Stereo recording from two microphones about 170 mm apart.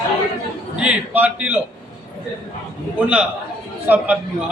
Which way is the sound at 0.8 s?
10° right (ahead or behind).